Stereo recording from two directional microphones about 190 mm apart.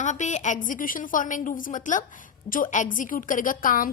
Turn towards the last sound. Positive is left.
turn(degrees=45)  # may be behind; listen again after turning